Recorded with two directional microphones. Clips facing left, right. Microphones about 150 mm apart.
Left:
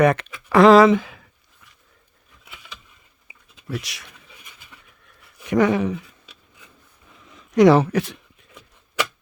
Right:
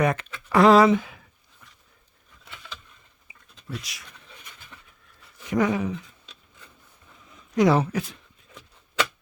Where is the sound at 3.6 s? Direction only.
75° left (ahead or behind).